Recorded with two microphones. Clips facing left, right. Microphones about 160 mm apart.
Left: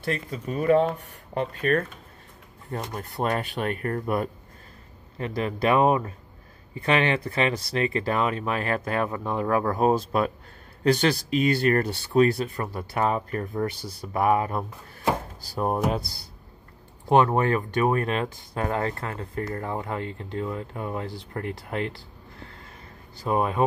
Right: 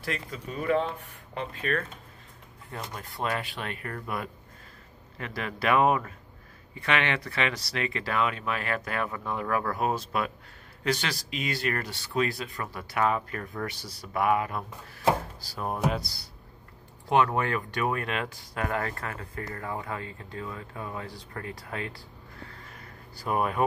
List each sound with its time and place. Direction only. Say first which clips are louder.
0.0 s speech: left 5 dB; 35° left (ahead or behind)
2.9 s speech: left 4 dB; 45° left (ahead or behind)
5.1 s speech: left 7 dB; 30° left (ahead or behind)
10.8 s speech: left 8 dB; 40° left (ahead or behind)
12.2 s speech: left 8 dB; 35° left (ahead or behind)
17.1 s speech: left 5 dB; 30° left (ahead or behind)
22.8 s a sound: left 1 dB; 25° left (ahead or behind)